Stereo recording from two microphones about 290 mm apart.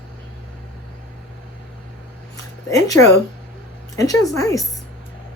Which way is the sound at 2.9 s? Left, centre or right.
Left.